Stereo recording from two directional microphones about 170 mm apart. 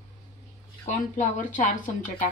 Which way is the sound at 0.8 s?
50° left (ahead or behind).